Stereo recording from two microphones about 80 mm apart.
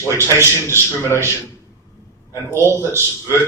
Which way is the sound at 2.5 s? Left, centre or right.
Right.